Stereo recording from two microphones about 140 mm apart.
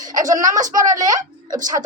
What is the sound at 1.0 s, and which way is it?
Speech, 25° right (ahead or behind).